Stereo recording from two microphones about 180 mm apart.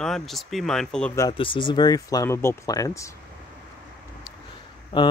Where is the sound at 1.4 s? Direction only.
30° left (ahead or behind).